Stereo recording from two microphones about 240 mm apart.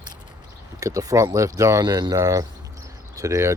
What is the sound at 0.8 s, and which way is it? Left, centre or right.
Speech, centre.